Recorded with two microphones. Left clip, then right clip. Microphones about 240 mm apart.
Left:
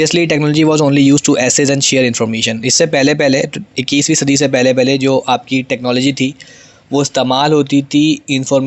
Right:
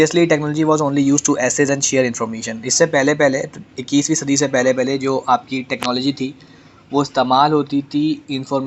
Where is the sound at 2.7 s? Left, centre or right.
Left.